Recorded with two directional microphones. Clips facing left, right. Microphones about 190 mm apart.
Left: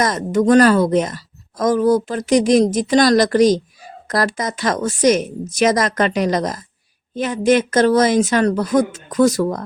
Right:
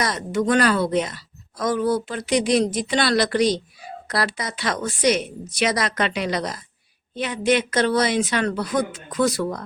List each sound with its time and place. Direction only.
0.0 s speech: 45° left (ahead or behind)